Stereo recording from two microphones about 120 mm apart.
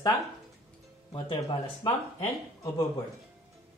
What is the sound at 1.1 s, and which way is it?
Speech, 40° left (ahead or behind).